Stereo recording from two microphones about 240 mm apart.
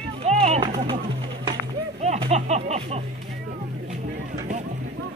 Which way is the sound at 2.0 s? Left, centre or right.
Right.